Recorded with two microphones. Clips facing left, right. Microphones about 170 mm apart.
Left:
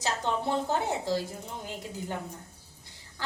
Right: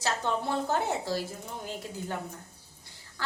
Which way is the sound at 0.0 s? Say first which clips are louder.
Even; 15° left (ahead or behind).